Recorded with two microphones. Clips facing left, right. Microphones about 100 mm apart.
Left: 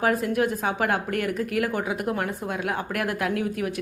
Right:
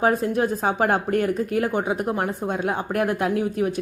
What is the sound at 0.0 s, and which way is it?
A woman's voice, 30° right (ahead or behind).